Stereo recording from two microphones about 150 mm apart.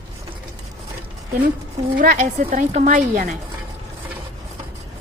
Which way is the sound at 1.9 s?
65° right (ahead or behind).